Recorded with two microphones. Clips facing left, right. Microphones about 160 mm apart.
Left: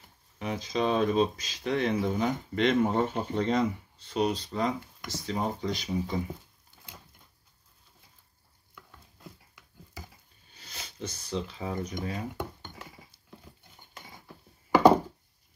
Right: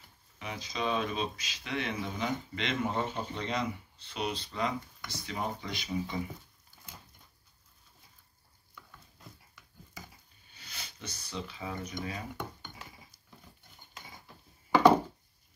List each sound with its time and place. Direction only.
0.4 s speech: 40° left (ahead or behind)
6.7 s a sound: 20° left (ahead or behind)
10.5 s speech: 40° left (ahead or behind)